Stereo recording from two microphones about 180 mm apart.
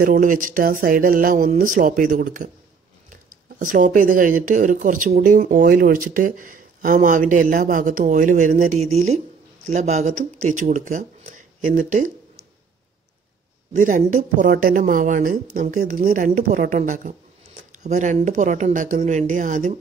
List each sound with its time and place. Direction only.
0.0 s speech: 50° right (ahead or behind)
13.7 s speech: 45° right (ahead or behind)